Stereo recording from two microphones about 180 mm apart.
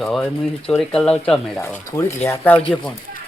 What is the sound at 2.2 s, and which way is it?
Speech, 10° left (ahead or behind).